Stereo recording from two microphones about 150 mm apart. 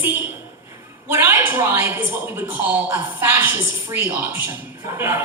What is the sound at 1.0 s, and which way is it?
A woman's voice, 15° right (ahead or behind).